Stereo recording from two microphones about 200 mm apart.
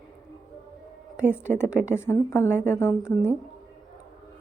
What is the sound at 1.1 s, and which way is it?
Speech, 5° right (ahead or behind).